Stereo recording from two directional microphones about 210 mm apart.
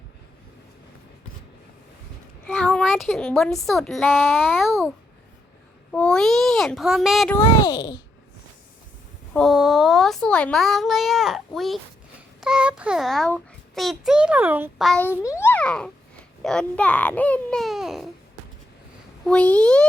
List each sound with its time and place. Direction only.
2.5 s a child's voice: 5° left (ahead or behind)
4.5 s a child's voice: centre (ahead or behind)
5.9 s a child's voice: 5° left (ahead or behind)
7.6 s a child's voice: 20° left (ahead or behind)
9.3 s a child's voice: centre (ahead or behind)
19.2 s a child's voice: 5° left (ahead or behind)